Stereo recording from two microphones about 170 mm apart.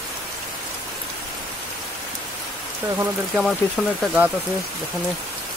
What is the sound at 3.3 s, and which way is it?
Speech, centre (ahead or behind).